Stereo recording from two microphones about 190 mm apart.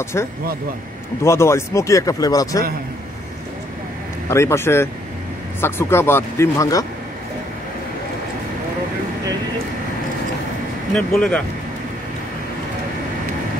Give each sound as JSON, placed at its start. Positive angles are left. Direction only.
{"t": 0.0, "sound": "speech", "side_deg": 15}
{"t": 4.3, "sound": "speech", "side_deg": 15}
{"t": 11.0, "sound": "speech", "side_deg": 5}